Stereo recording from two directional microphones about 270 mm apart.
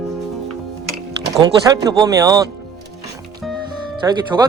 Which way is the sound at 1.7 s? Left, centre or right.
Centre.